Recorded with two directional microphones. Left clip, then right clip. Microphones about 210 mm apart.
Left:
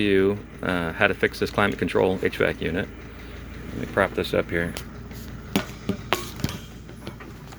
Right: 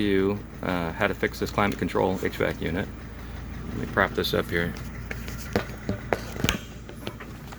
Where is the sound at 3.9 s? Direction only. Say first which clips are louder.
Left 2 dB; 5° left (ahead or behind).